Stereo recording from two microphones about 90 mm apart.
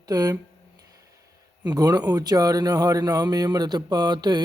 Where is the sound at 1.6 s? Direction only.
45° right (ahead or behind).